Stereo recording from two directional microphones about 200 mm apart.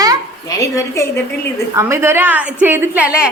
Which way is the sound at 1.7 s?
15° right (ahead or behind).